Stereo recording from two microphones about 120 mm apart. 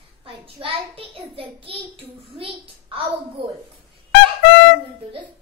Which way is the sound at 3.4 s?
45° right (ahead or behind).